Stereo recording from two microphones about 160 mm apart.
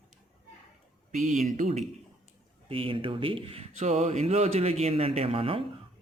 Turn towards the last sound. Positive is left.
turn(degrees=-35)  # may be behind; listen again after turning